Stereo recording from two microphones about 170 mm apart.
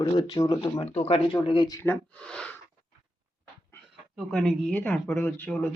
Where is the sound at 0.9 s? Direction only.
35° left (ahead or behind).